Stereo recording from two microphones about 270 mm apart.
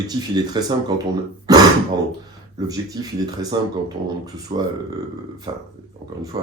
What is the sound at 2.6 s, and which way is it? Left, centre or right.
Speech, centre.